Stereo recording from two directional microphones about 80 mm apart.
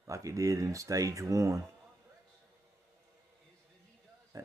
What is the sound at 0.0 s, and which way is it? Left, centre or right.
Speech, right.